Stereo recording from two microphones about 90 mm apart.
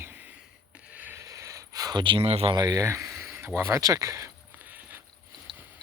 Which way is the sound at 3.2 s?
25° right (ahead or behind).